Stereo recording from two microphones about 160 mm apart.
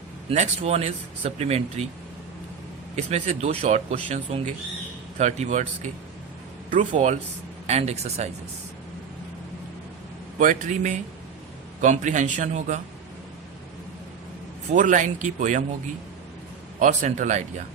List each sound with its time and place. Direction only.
0.3 s speech: 40° right (ahead or behind)
2.9 s speech: 45° right (ahead or behind)
10.3 s speech: 50° right (ahead or behind)
14.7 s speech: 50° right (ahead or behind)
16.8 s speech: 50° right (ahead or behind)